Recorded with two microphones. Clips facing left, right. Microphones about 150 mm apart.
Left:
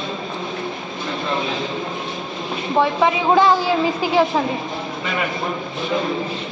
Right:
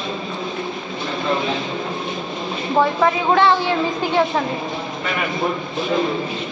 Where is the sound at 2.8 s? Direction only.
10° left (ahead or behind).